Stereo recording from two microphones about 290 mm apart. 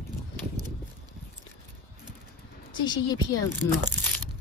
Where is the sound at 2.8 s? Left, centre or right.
Centre.